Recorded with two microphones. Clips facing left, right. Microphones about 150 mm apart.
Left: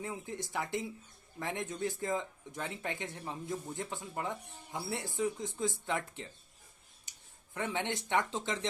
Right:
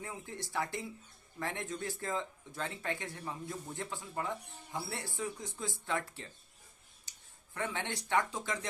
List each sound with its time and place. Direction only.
0.0 s speech: 20° left (ahead or behind)
7.1 s a sound: 20° left (ahead or behind)
7.5 s speech: 20° left (ahead or behind)